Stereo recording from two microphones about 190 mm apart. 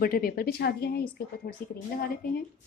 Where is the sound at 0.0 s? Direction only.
50° left (ahead or behind).